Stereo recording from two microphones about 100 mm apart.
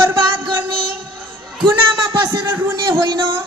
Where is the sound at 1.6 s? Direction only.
50° right (ahead or behind).